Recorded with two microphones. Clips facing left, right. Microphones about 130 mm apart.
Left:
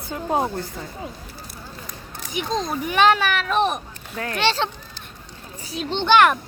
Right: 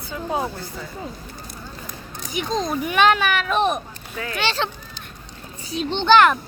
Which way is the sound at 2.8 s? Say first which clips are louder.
Left 1 dB; 35° left (ahead or behind).